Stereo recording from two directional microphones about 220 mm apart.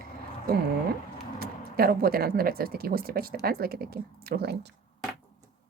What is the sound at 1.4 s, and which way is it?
Speech, 45° right (ahead or behind).